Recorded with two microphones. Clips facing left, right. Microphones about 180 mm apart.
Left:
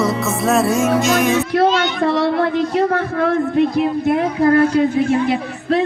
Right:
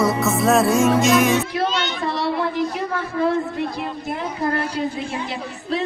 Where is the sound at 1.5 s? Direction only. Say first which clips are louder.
Left 8 dB; 60° left (ahead or behind).